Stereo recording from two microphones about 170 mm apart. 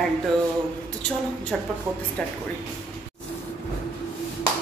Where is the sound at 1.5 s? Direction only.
5° left (ahead or behind).